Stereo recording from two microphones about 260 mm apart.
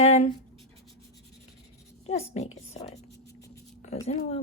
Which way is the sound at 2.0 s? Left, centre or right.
Left.